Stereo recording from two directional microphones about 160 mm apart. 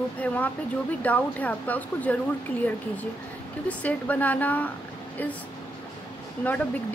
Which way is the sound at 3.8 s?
10° left (ahead or behind).